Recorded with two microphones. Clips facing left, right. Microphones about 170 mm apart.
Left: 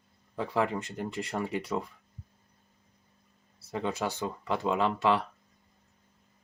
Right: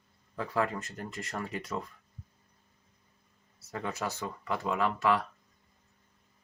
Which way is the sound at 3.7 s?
25° left (ahead or behind).